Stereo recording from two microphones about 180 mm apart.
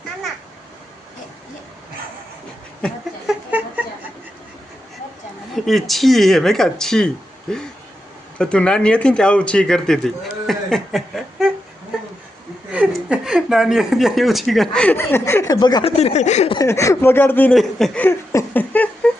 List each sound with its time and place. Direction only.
2.8 s a sound: 5° left (ahead or behind)
5.5 s speech: centre (ahead or behind)
12.9 s speech: 5° right (ahead or behind); by 15.9 s 25° left (ahead or behind)
15.9 s speech: 35° left (ahead or behind)
16.6 s speech: 15° left (ahead or behind)